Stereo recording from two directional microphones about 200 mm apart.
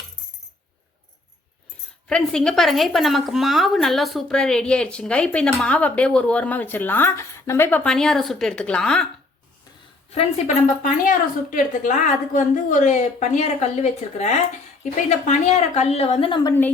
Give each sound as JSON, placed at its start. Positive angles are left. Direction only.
{"t": 2.0, "sound": "a woman's voice", "side_deg": 5}
{"t": 10.1, "sound": "a woman's voice", "side_deg": 35}